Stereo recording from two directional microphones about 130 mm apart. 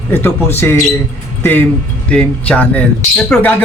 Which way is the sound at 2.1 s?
10° left (ahead or behind).